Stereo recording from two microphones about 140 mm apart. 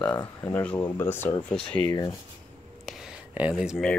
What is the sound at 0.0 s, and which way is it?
Speech, 10° left (ahead or behind).